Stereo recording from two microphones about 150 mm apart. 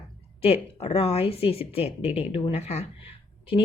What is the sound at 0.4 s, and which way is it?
Speech, 40° left (ahead or behind).